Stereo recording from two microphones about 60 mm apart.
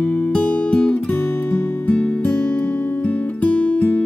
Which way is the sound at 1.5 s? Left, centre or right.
Left.